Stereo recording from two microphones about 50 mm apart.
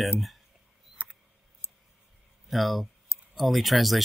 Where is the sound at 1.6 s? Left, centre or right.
Left.